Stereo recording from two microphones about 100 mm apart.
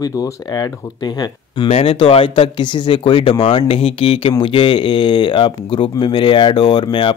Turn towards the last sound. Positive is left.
turn(degrees=55)  # may be behind; listen again after turning